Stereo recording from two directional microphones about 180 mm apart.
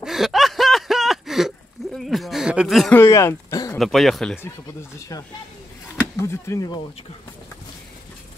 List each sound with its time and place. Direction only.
0.0 s snicker: centre (ahead or behind)
3.0 s speech: 15° left (ahead or behind)
3.7 s speech: centre (ahead or behind)
4.9 s speech: 20° left (ahead or behind)